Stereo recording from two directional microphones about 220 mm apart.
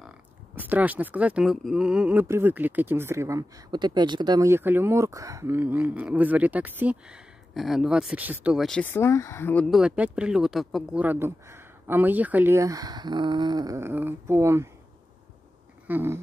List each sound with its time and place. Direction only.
0.6 s speech: 5° right (ahead or behind)
15.9 s speech: 10° right (ahead or behind)